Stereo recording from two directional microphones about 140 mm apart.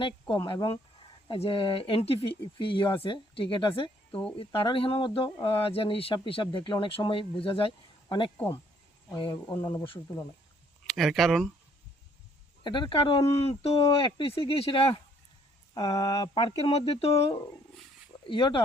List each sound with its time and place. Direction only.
0.4 s speech: 30° left (ahead or behind)
4.1 s speech: 10° left (ahead or behind)
4.4 s speech: 40° left (ahead or behind)
9.6 s speech: 20° left (ahead or behind)
10.8 s speech: centre (ahead or behind)
12.6 s speech: 35° left (ahead or behind)
15.7 s speech: 30° left (ahead or behind)